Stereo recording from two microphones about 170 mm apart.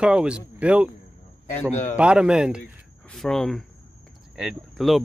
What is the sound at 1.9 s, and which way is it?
Speech, 5° right (ahead or behind).